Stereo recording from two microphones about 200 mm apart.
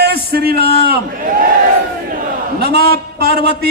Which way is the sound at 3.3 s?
30° left (ahead or behind).